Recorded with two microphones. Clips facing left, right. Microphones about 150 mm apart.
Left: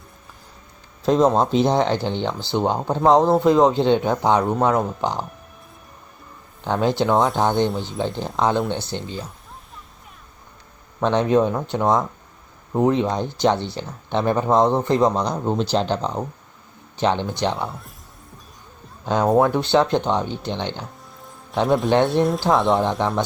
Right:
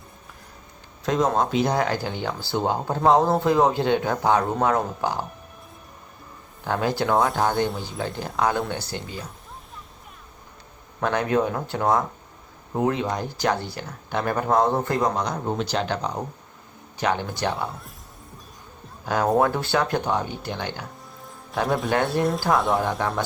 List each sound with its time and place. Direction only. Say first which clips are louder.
1.0 s speech: left 5 dB; 30° left (ahead or behind)
6.7 s speech: left 4 dB; 20° left (ahead or behind)
11.0 s speech: left 5 dB; 25° left (ahead or behind)
17.6 s speech: left 2 dB; centre (ahead or behind)
19.0 s speech: left 3 dB; 20° left (ahead or behind)
22.2 s speech: left 3 dB; centre (ahead or behind)
22.8 s speech: left 4 dB; 25° left (ahead or behind)